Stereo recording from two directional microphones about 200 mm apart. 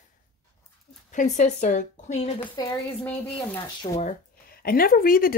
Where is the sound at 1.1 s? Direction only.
40° left (ahead or behind).